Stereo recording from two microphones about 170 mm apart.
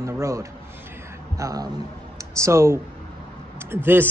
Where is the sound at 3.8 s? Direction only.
15° right (ahead or behind).